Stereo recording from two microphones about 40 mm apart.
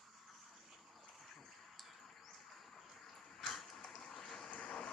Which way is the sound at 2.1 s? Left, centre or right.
Centre.